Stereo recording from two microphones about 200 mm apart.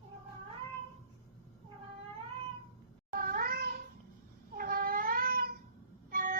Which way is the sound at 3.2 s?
45° right (ahead or behind).